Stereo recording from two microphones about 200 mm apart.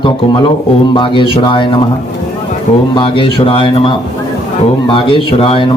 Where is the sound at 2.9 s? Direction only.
25° left (ahead or behind).